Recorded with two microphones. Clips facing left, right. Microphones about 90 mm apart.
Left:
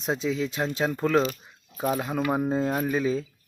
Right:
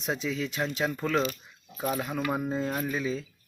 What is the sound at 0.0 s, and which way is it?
Speech, 30° left (ahead or behind).